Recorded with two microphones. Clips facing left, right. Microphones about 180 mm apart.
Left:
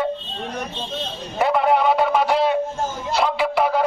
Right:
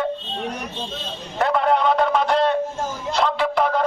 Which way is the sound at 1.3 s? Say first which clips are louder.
Left 1 dB; 10° left (ahead or behind).